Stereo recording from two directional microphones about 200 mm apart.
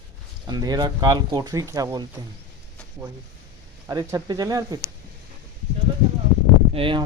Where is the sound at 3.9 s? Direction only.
20° right (ahead or behind).